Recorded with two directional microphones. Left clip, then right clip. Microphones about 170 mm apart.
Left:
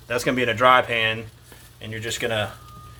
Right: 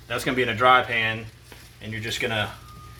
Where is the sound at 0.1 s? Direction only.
60° left (ahead or behind).